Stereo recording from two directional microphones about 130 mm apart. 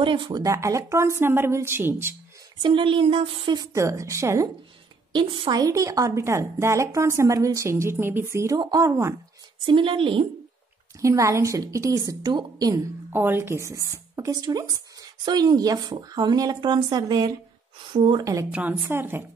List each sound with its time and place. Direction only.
0.0 s a sound: 40° right (ahead or behind)
0.4 s speech: 25° right (ahead or behind)
2.6 s a sound: 40° right (ahead or behind)
3.6 s speech: 25° right (ahead or behind)
5.1 s speech: 35° right (ahead or behind)
9.7 s a sound: 40° right (ahead or behind)
11.0 s speech: 25° right (ahead or behind)
13.1 s speech: 15° right (ahead or behind); by 17.3 s 35° right (ahead or behind)
17.9 s speech: 45° right (ahead or behind)
18.2 s speech: 25° right (ahead or behind)
18.5 s a woman's voice: 15° right (ahead or behind)